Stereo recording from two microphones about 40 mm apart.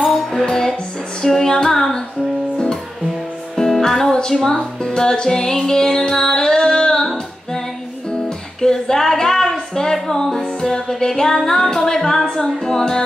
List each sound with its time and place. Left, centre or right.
0.1 s music: centre
2.5 s music: left
3.5 s music: centre
4.1 s music: centre